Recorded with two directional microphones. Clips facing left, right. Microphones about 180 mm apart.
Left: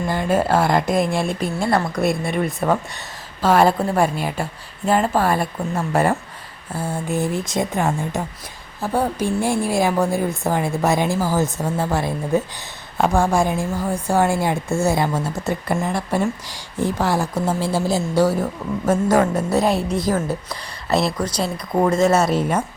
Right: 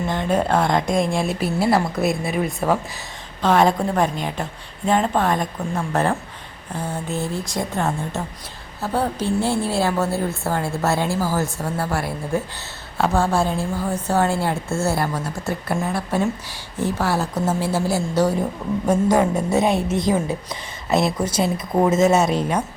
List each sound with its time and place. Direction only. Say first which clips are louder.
0.1 s a woman's voice: left 2 dB; 5° left (ahead or behind)
18.9 s speech: left 1 dB; 15° right (ahead or behind)
19.5 s a woman's voice: even; centre (ahead or behind)
20.0 s speech: even; 20° right (ahead or behind)
21.4 s a woman's voice: even; 5° right (ahead or behind)